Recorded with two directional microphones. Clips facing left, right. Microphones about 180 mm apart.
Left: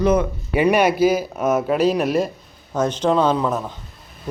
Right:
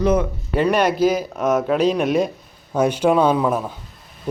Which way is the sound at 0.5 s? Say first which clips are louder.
Left 1 dB; 10° left (ahead or behind).